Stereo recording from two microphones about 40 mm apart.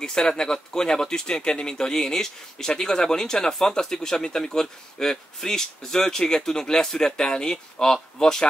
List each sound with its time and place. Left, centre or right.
0.0 s speech: centre